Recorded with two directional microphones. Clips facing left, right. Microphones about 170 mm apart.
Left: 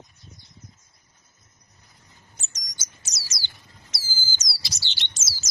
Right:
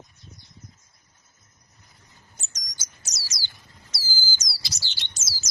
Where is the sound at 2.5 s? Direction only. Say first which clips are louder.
Left 1 dB; 25° left (ahead or behind).